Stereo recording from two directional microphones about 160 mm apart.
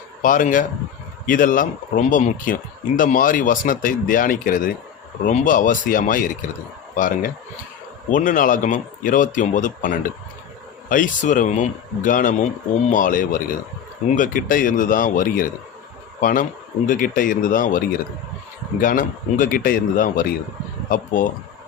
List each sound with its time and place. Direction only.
0.2 s speech: 55° left (ahead or behind)